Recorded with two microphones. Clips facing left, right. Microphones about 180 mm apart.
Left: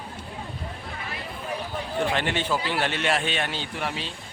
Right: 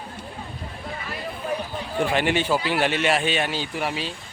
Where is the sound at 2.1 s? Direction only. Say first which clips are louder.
Right 7 dB; 10° right (ahead or behind).